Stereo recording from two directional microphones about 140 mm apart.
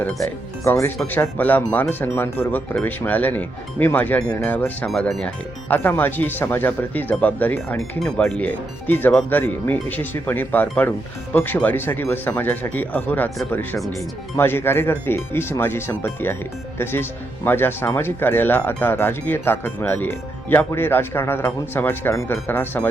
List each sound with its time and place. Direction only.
0.6 s speech: 20° left (ahead or behind)
13.7 s speech: centre (ahead or behind)
14.3 s speech: 15° left (ahead or behind)